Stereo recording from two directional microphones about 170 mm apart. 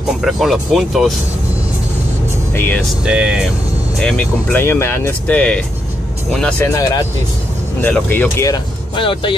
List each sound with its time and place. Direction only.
0.2 s speech: centre (ahead or behind)
2.5 s speech: 10° left (ahead or behind)
3.1 s speech: 5° right (ahead or behind)
6.6 s speech: 15° left (ahead or behind)
8.5 s speech: 30° left (ahead or behind)